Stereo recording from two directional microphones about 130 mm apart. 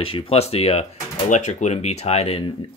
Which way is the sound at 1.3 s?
70° left (ahead or behind).